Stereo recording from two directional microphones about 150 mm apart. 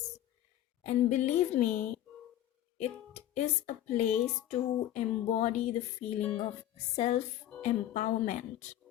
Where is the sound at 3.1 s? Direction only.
45° left (ahead or behind).